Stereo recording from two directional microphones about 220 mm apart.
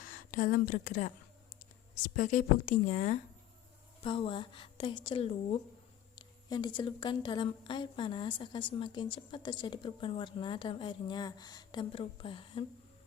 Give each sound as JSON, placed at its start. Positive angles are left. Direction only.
{"t": 0.0, "sound": "a woman's voice", "side_deg": 40}